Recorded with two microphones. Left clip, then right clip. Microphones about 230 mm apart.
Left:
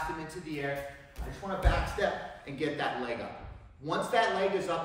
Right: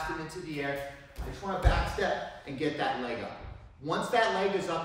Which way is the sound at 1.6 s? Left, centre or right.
Centre.